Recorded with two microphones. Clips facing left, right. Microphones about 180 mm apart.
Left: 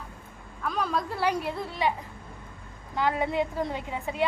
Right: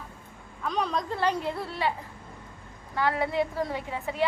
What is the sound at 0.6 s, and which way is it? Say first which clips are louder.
A woman's voice: even; 5° left (ahead or behind).